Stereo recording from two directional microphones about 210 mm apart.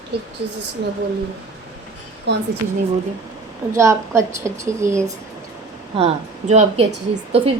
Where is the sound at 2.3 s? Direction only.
55° right (ahead or behind).